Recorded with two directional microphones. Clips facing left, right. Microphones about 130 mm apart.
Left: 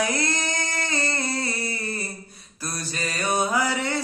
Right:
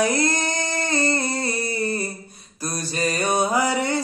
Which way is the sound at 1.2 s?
20° right (ahead or behind).